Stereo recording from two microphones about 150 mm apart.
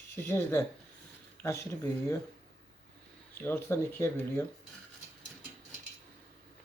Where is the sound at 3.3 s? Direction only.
15° left (ahead or behind).